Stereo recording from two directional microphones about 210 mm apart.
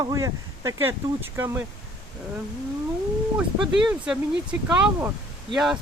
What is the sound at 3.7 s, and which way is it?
Speech, centre (ahead or behind).